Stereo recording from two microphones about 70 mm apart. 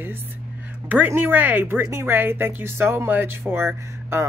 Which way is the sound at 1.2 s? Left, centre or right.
Right.